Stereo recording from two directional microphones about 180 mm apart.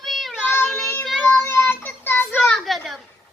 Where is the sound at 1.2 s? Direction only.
10° left (ahead or behind).